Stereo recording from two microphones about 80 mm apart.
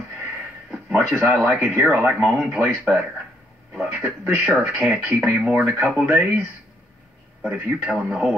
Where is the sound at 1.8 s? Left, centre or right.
Centre.